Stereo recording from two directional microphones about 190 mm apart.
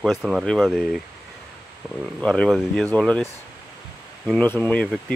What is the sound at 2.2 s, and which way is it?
Speech, 5° left (ahead or behind).